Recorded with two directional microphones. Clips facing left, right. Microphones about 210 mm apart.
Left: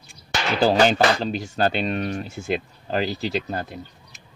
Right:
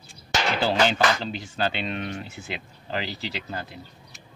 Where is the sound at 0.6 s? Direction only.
40° left (ahead or behind).